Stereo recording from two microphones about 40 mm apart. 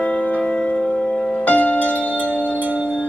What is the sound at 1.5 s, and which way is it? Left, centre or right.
Music, left.